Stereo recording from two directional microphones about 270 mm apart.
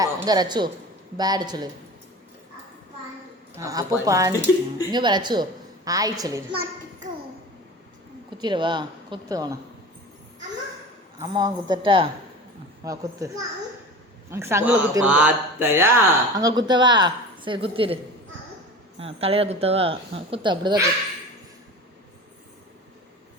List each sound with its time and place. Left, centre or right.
0.0 s a woman's voice: centre
3.6 s speech: centre
8.4 s speech: centre
11.2 s speech: centre